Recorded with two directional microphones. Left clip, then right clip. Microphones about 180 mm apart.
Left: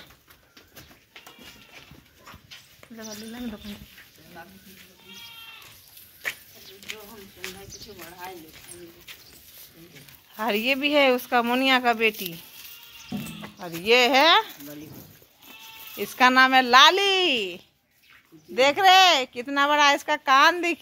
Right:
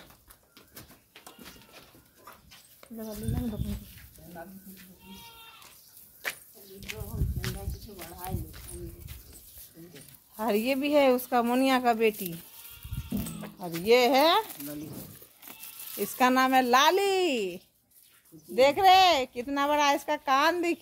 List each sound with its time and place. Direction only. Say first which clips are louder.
6.9 s speech: left 3 dB; 10° right (ahead or behind)
7.4 s speech: left 2 dB; 5° left (ahead or behind)
10.4 s speech: left 4 dB; 5° left (ahead or behind)
13.6 s speech: left 1 dB; 20° left (ahead or behind)
13.8 s speech: left 4 dB; centre (ahead or behind)
14.9 s a sound: right 2 dB; 15° right (ahead or behind)
16.0 s speech: left 6 dB; 10° right (ahead or behind)